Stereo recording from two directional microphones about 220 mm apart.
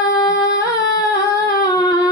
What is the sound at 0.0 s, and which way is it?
Singing, 15° left (ahead or behind).